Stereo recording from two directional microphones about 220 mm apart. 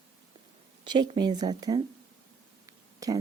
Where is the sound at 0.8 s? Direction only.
20° right (ahead or behind).